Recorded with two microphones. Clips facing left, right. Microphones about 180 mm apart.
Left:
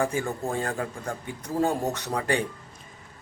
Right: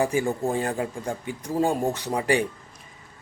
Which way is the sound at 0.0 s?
15° right (ahead or behind).